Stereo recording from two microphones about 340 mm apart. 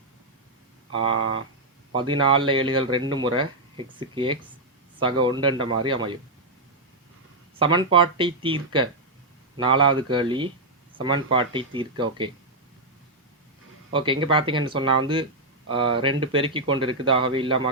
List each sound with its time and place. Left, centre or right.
1.1 s speech: right
1.9 s speech: centre
7.6 s speech: centre
13.9 s speech: centre